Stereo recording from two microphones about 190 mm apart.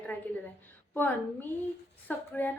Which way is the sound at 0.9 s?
10° left (ahead or behind).